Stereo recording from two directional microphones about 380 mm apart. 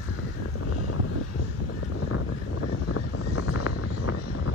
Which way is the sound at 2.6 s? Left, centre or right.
Left.